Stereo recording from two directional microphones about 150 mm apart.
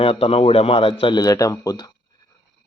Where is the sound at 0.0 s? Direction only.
40° left (ahead or behind).